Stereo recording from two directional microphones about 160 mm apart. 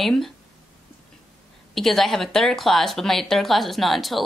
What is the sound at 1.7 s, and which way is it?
Speech, centre (ahead or behind).